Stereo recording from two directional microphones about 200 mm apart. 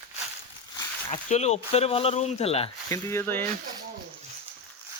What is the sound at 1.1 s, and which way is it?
Speech, 35° left (ahead or behind).